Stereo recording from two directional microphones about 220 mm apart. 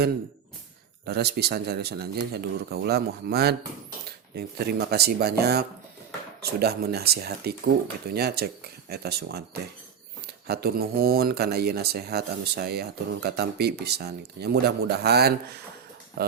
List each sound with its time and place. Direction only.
1.0 s speech: 45° right (ahead or behind)
10.4 s speech: 45° right (ahead or behind)